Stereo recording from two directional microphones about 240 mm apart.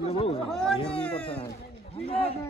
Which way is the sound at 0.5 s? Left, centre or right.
Centre.